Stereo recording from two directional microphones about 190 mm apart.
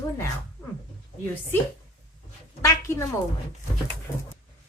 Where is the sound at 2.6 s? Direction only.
15° left (ahead or behind).